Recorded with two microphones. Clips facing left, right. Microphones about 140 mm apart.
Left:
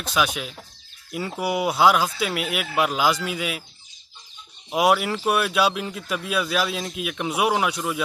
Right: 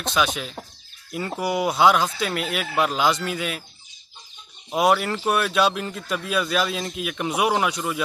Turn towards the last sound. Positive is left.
turn(degrees=0)  # may be behind; listen again after turning